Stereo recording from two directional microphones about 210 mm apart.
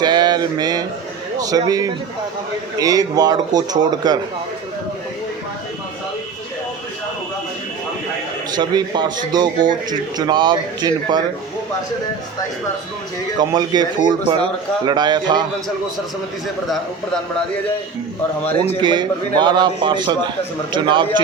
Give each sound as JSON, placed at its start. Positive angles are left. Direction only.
{"t": 0.0, "sound": "a sound", "side_deg": -20}
{"t": 1.4, "sound": "a man's voice", "side_deg": -15}
{"t": 8.5, "sound": "a man's voice", "side_deg": -20}
{"t": 13.4, "sound": "a man's voice", "side_deg": -20}
{"t": 18.8, "sound": "a man's voice", "side_deg": -20}